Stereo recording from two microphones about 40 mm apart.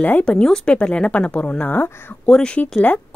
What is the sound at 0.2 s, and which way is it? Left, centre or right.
A woman's voice, left.